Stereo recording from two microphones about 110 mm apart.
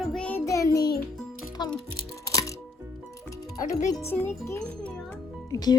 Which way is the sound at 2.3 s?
30° left (ahead or behind).